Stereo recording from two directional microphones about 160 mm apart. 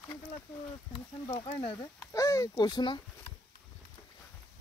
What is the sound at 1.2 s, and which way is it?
Speech, 35° left (ahead or behind).